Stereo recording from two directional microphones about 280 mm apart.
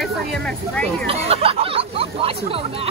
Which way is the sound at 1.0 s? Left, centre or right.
Right.